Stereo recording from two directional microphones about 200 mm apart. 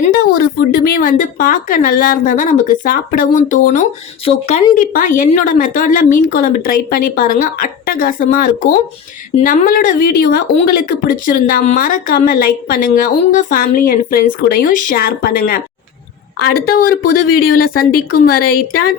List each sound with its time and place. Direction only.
0.0 s a woman's voice: 50° left (ahead or behind); by 4.6 s 30° left (ahead or behind)
4.7 s speech: 45° left (ahead or behind)